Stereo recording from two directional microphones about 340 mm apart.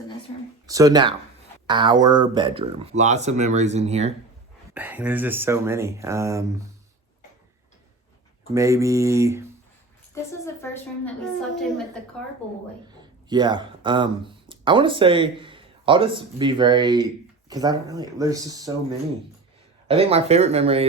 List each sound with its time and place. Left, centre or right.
0.7 s speech: centre
4.7 s speech: centre
8.5 s speech: centre
10.4 s a woman's voice: centre
13.3 s speech: centre
19.9 s speech: centre